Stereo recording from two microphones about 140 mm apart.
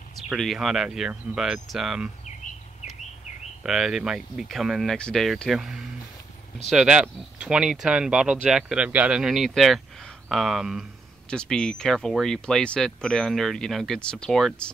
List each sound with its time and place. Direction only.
0.3 s speech: centre (ahead or behind)
3.6 s speech: 5° right (ahead or behind)